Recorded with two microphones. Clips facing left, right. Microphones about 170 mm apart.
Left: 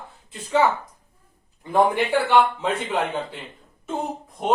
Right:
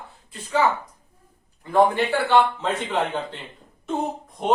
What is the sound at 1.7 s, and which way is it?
A man's voice, 15° left (ahead or behind).